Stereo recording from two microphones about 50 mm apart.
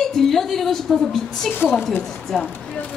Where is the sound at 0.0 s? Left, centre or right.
Centre.